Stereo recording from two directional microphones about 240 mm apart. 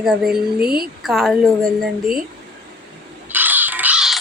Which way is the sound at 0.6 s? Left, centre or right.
Right.